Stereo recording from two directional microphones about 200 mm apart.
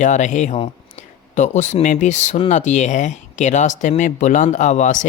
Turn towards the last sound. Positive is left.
turn(degrees=40)  # may be behind; listen again after turning